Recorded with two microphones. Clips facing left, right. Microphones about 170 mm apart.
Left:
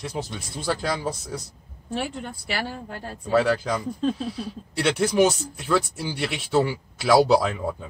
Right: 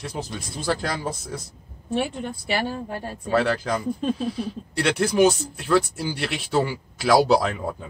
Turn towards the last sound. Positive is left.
turn(degrees=0)  # may be behind; listen again after turning